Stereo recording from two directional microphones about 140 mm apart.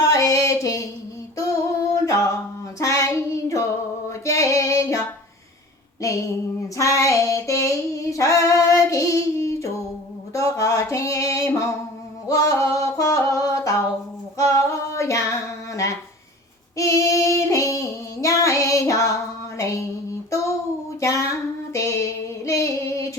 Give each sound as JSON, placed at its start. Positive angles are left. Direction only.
{"t": 0.0, "sound": "music", "side_deg": 25}
{"t": 2.0, "sound": "a sound", "side_deg": 25}
{"t": 2.7, "sound": "child singing", "side_deg": 20}
{"t": 4.1, "sound": "music", "side_deg": 20}
{"t": 6.0, "sound": "child singing", "side_deg": 20}
{"t": 8.1, "sound": "female singing", "side_deg": 20}
{"t": 10.3, "sound": "a sound", "side_deg": 20}
{"t": 12.3, "sound": "female singing", "side_deg": 25}
{"t": 19.5, "sound": "a sound", "side_deg": 20}
{"t": 21.0, "sound": "female singing", "side_deg": 20}